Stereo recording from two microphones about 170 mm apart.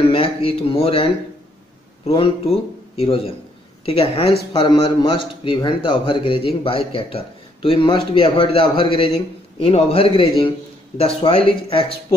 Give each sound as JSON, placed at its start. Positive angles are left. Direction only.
{"t": 0.1, "sound": "speech", "side_deg": 35}
{"t": 2.0, "sound": "a man's voice", "side_deg": 35}